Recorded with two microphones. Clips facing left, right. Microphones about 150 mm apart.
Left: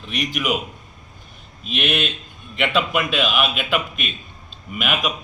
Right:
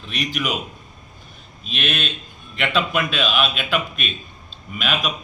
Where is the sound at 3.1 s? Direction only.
10° left (ahead or behind).